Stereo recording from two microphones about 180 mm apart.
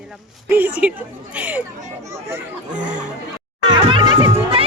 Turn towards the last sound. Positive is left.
turn(degrees=-20)  # may be behind; listen again after turning